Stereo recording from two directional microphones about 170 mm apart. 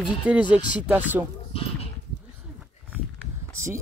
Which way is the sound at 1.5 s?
35° left (ahead or behind).